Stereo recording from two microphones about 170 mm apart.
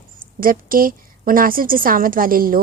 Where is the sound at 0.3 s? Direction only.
55° right (ahead or behind).